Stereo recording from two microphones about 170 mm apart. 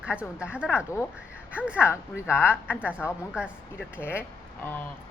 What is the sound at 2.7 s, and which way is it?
Speech, 10° right (ahead or behind).